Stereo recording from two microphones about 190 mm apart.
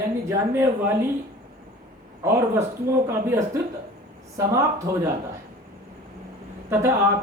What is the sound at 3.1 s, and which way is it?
Speech, 15° right (ahead or behind).